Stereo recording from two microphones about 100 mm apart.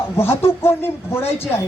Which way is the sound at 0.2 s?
25° left (ahead or behind).